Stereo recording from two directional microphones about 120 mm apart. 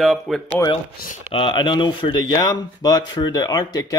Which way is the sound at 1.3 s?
45° left (ahead or behind).